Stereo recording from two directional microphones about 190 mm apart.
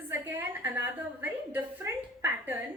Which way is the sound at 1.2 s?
10° right (ahead or behind).